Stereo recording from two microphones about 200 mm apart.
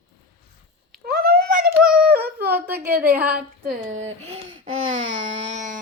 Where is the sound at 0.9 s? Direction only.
50° right (ahead or behind).